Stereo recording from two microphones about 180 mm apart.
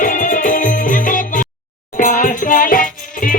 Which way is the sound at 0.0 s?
45° left (ahead or behind).